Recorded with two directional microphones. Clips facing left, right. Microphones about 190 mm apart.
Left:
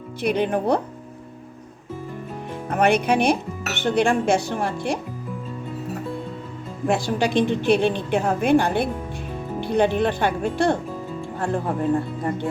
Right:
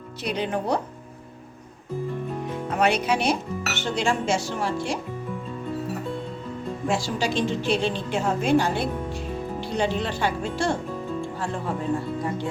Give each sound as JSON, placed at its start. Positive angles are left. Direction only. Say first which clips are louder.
{"t": 0.2, "sound": "a woman's voice", "louder": "left 5 dB", "side_deg": 55}
{"t": 2.6, "sound": "a woman's voice", "louder": "left 4 dB", "side_deg": 55}
{"t": 6.8, "sound": "a woman's voice", "louder": "left 5 dB", "side_deg": 55}